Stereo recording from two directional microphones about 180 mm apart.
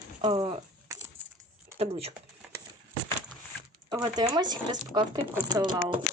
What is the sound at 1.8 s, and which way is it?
Speech, 35° right (ahead or behind).